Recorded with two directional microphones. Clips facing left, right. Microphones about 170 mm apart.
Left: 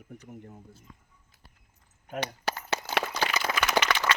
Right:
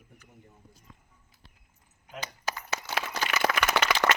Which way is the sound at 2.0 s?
65° left (ahead or behind).